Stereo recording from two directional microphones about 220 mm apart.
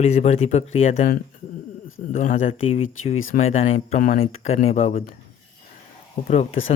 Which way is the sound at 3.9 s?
30° left (ahead or behind).